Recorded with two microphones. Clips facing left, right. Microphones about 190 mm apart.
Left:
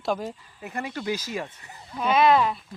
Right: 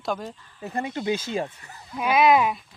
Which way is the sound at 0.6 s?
30° right (ahead or behind).